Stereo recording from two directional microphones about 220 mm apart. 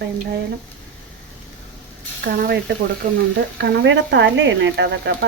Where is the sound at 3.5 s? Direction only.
55° right (ahead or behind).